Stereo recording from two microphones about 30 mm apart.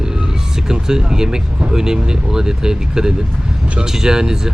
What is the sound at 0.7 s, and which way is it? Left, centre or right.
Speech, right.